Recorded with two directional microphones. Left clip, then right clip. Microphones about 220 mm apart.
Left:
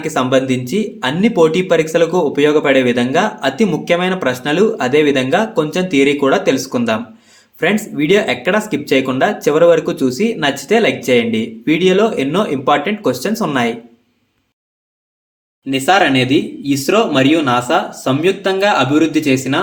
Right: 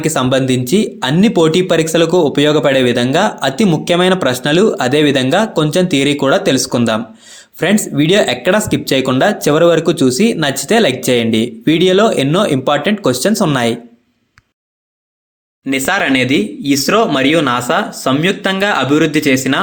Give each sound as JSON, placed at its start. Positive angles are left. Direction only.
{"t": 0.0, "sound": "speech", "side_deg": -35}
{"t": 15.6, "sound": "speech", "side_deg": -35}